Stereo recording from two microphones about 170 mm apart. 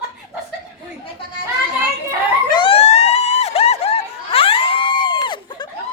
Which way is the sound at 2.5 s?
30° left (ahead or behind).